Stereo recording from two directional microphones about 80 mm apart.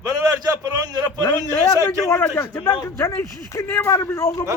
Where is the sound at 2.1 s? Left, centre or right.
Left.